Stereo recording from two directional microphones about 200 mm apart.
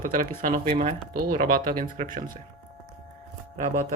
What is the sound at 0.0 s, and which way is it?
Speech, 45° right (ahead or behind).